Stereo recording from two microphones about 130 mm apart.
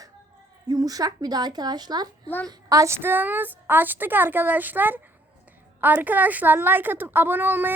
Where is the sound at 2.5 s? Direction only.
25° right (ahead or behind).